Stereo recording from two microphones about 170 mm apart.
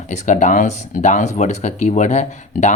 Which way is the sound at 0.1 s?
45° left (ahead or behind).